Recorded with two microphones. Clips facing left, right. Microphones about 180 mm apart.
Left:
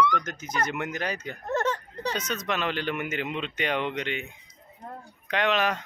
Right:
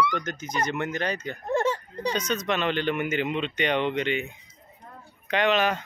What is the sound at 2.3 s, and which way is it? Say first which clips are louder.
Speech: right 4 dB; 5° left (ahead or behind).